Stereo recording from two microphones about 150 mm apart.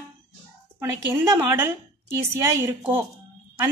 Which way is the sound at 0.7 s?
20° right (ahead or behind).